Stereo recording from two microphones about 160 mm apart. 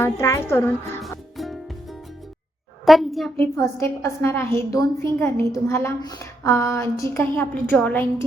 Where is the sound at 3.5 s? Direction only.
20° left (ahead or behind).